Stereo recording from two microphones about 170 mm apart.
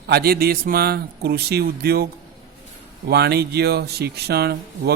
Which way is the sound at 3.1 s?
70° right (ahead or behind).